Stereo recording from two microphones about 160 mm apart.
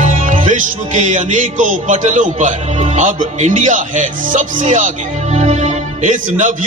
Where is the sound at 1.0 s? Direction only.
50° right (ahead or behind).